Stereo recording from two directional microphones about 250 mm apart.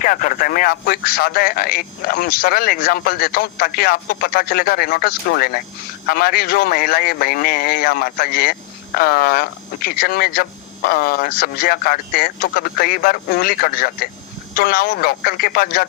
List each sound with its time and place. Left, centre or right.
0.0 s speech: left